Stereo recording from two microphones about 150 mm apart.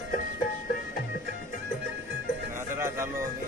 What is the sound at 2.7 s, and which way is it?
Music, 15° right (ahead or behind).